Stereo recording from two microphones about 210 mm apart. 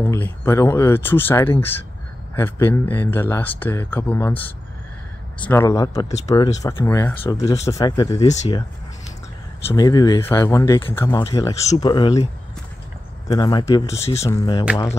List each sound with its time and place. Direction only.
0.0 s speech: 10° left (ahead or behind)
9.7 s speech: 20° left (ahead or behind)
13.3 s speech: 20° left (ahead or behind)
14.1 s speech: 15° left (ahead or behind)